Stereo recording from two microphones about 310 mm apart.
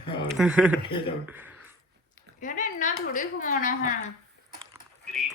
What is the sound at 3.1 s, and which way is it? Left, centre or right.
Speech, left.